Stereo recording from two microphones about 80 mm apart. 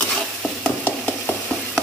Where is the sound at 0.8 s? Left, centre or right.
Centre.